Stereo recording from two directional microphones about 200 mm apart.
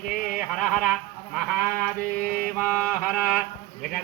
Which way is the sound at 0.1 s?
45° left (ahead or behind).